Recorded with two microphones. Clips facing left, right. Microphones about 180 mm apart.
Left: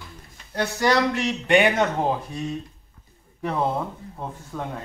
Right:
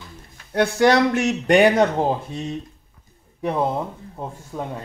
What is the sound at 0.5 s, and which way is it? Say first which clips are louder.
Speech: right 5 dB; 60° right (ahead or behind).